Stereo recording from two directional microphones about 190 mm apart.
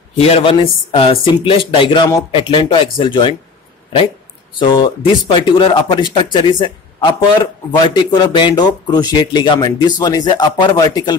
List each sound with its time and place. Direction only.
0.2 s speech: 30° left (ahead or behind)
4.6 s speech: 25° left (ahead or behind)